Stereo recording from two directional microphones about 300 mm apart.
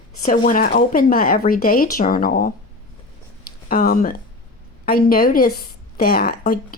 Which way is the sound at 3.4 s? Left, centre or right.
Left.